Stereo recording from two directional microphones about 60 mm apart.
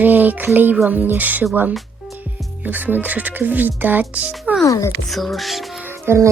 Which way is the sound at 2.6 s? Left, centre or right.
Right.